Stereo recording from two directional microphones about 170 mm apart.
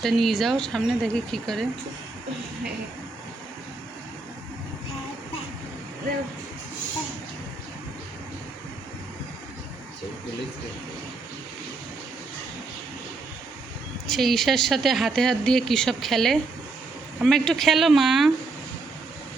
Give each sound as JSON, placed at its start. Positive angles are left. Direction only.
{"t": 0.0, "sound": "speech", "side_deg": 0}
{"t": 14.1, "sound": "speech", "side_deg": 0}